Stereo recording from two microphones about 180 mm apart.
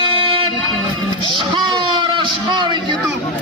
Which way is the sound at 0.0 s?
30° right (ahead or behind).